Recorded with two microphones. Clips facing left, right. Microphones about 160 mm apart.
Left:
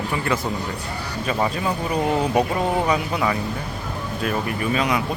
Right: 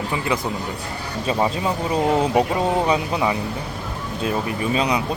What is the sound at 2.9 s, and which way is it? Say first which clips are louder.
Speech: right 1 dB; 15° right (ahead or behind).